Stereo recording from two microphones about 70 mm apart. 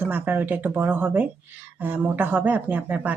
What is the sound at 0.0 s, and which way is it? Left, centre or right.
Speech, right.